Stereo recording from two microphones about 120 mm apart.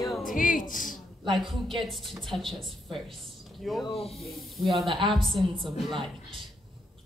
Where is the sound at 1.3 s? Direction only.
Centre (ahead or behind).